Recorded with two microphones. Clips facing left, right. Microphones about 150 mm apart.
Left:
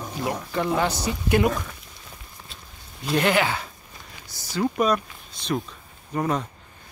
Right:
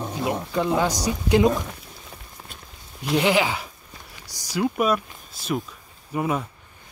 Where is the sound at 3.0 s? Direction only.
10° right (ahead or behind).